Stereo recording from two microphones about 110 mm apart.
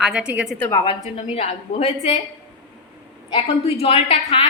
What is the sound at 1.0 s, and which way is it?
A woman's voice, 75° left (ahead or behind).